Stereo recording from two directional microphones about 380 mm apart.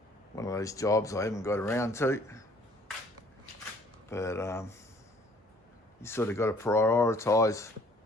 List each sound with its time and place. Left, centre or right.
0.3 s speech: centre
4.1 s speech: centre
6.0 s speech: centre